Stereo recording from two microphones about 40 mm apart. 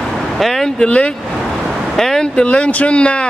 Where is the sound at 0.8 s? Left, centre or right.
Left.